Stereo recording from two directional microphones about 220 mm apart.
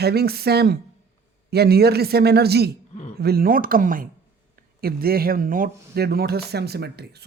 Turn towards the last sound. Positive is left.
turn(degrees=-50)  # may be behind; listen again after turning